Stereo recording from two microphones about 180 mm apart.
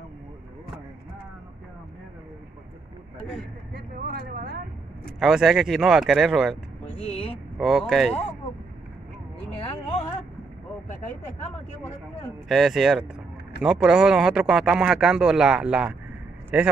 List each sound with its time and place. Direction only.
3.7 s speech: 60° right (ahead or behind)
5.2 s speech: centre (ahead or behind)
6.5 s a sound: 35° left (ahead or behind)
7.5 s speech: centre (ahead or behind)
9.6 s a sound: 30° left (ahead or behind)
12.4 s speech: centre (ahead or behind)